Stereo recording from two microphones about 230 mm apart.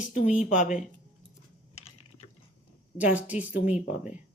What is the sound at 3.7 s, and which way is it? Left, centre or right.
Speech, left.